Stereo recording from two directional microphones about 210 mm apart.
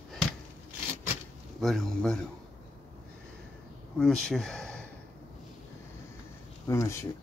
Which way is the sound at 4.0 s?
Centre (ahead or behind).